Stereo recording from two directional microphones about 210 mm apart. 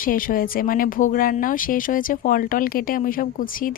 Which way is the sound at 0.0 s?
40° left (ahead or behind).